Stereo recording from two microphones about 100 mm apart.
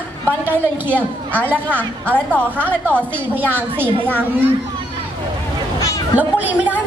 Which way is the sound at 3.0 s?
20° right (ahead or behind).